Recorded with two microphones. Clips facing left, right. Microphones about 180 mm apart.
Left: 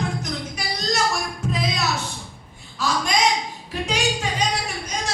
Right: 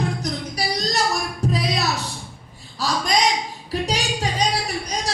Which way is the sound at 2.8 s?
35° right (ahead or behind).